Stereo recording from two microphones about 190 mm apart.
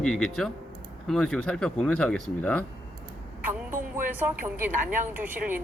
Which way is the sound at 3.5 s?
10° right (ahead or behind).